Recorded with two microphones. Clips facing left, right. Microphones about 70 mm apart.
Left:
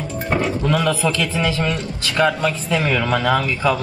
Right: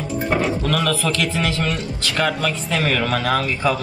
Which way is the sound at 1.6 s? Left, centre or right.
Centre.